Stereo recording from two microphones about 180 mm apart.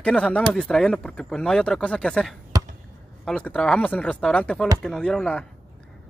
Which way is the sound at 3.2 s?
5° left (ahead or behind).